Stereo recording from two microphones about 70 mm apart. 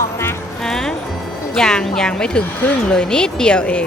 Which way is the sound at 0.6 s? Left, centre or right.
Centre.